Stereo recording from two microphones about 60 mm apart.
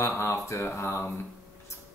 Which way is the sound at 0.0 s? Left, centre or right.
Left.